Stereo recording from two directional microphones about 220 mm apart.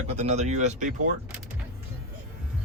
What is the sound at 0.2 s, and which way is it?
Speech, 30° right (ahead or behind).